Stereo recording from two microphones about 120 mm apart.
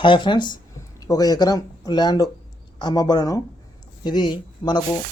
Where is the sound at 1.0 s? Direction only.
30° left (ahead or behind).